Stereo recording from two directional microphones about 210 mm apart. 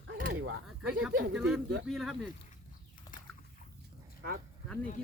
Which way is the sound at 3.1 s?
40° left (ahead or behind).